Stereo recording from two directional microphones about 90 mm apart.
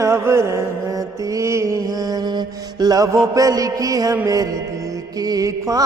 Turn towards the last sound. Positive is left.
turn(degrees=-40)  # may be behind; listen again after turning